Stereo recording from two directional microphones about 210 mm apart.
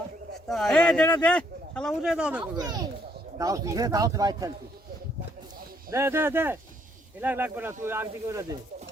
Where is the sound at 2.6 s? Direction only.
20° right (ahead or behind).